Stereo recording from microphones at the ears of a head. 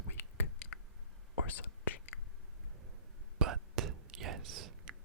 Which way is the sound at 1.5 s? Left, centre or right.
Left.